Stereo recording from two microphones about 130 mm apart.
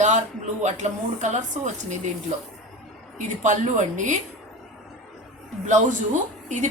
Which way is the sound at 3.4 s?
70° right (ahead or behind).